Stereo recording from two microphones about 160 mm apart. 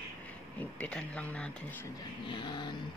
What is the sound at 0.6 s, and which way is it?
Speech, 5° left (ahead or behind).